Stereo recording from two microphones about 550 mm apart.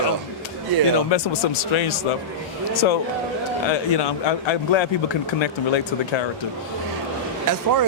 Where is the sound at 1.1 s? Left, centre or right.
Left.